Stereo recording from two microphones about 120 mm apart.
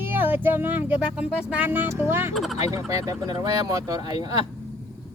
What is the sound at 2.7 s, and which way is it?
Speech, 30° right (ahead or behind).